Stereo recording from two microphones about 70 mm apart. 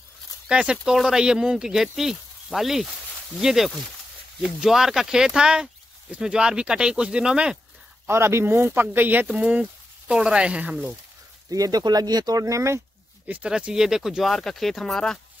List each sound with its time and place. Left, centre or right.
0.5 s speech: centre
8.1 s speech: right
9.5 s speech: centre
11.5 s speech: right
12.4 s speech: right
13.3 s speech: centre